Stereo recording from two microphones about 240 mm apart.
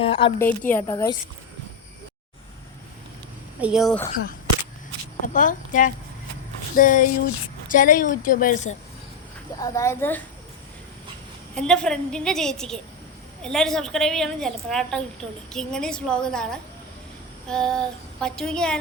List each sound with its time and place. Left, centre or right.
0.0 s a woman's voice: left
0.7 s speech: centre
3.6 s a woman's voice: centre
5.2 s a woman's voice: left
9.6 s speech: centre
11.5 s a woman's voice: centre